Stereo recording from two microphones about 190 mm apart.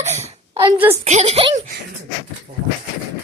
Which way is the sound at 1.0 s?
35° right (ahead or behind).